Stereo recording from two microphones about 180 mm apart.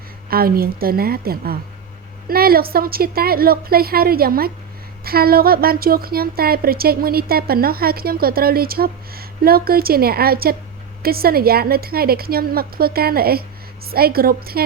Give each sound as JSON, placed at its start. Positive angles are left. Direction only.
{"t": 0.3, "sound": "a woman's voice", "side_deg": -55}